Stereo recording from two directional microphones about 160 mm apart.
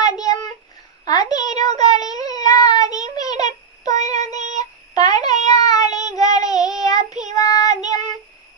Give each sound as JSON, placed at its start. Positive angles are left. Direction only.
{"t": 1.0, "sound": "a sound", "side_deg": 25}
{"t": 4.4, "sound": "female singing", "side_deg": -45}
{"t": 4.9, "sound": "child singing", "side_deg": 25}